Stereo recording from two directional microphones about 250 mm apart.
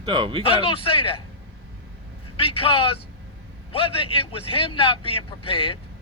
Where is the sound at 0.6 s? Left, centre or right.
Left.